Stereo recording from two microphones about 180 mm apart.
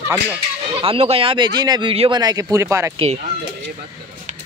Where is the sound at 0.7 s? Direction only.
30° right (ahead or behind).